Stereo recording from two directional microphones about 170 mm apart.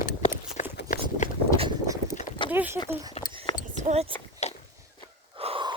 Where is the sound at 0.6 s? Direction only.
40° left (ahead or behind).